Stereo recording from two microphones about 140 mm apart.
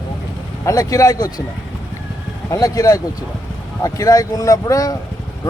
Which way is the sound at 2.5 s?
25° left (ahead or behind).